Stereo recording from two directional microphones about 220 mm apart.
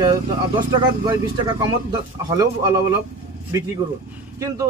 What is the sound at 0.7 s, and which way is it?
A man's voice, 20° right (ahead or behind).